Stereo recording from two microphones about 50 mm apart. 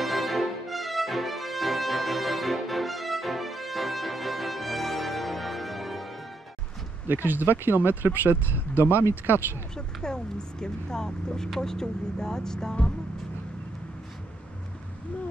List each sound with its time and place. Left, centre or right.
0.0 s music: centre
7.1 s speech: right
10.0 s speech: centre